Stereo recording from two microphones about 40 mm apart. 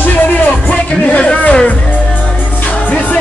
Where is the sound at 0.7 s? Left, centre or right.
Left.